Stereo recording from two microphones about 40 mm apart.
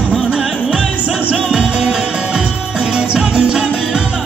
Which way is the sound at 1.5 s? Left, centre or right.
Right.